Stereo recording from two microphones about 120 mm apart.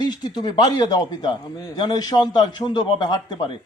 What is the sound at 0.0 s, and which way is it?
A man's voice, 35° left (ahead or behind).